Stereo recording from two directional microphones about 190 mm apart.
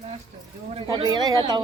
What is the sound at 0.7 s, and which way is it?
Speech, 25° right (ahead or behind).